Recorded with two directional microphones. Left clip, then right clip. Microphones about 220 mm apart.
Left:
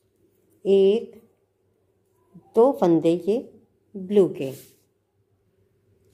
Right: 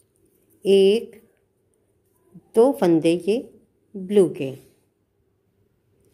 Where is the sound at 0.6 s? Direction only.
20° right (ahead or behind).